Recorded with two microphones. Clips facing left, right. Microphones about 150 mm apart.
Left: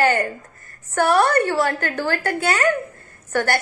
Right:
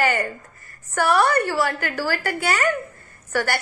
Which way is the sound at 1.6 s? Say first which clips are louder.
Left 2 dB; 50° left (ahead or behind).